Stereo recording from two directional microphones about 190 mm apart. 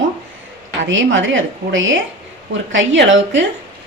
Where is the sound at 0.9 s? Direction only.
80° right.